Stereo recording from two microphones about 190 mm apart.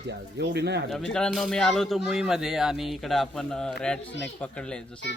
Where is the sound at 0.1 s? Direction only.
60° right (ahead or behind).